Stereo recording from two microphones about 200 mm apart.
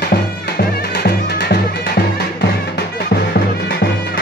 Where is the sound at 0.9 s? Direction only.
55° left (ahead or behind).